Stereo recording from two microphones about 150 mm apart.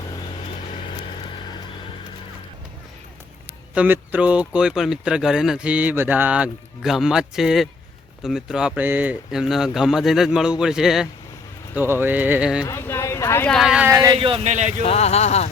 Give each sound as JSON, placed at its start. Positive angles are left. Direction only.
{"t": 3.8, "sound": "speech", "side_deg": -10}
{"t": 12.6, "sound": "speech", "side_deg": 20}
{"t": 13.5, "sound": "speech", "side_deg": 0}
{"t": 13.9, "sound": "speech", "side_deg": -25}
{"t": 14.2, "sound": "a man's voice", "side_deg": -35}
{"t": 14.4, "sound": "speech", "side_deg": -50}
{"t": 14.8, "sound": "speech", "side_deg": 45}